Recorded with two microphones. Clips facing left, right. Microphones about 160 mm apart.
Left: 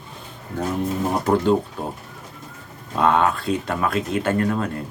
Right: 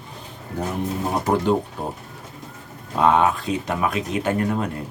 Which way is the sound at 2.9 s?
15° right (ahead or behind).